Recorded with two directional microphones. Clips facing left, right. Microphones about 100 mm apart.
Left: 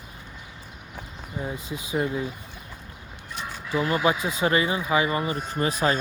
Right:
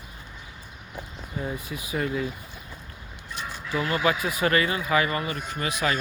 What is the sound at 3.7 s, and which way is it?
Speech, 20° left (ahead or behind).